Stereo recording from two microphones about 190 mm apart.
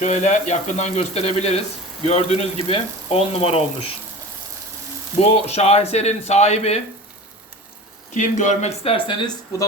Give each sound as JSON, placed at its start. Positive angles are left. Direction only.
{"t": 0.0, "sound": "speech", "side_deg": 40}
{"t": 5.5, "sound": "speech", "side_deg": 35}
{"t": 8.1, "sound": "speech", "side_deg": 40}